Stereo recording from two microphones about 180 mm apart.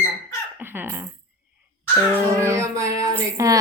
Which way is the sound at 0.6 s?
10° right (ahead or behind).